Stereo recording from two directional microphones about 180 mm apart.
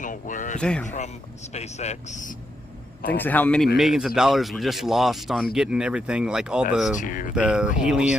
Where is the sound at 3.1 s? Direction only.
10° left (ahead or behind).